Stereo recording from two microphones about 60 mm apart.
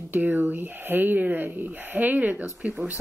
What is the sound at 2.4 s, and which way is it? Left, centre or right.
Speech, centre.